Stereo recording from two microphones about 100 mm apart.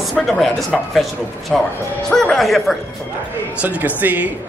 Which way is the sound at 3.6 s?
15° right (ahead or behind).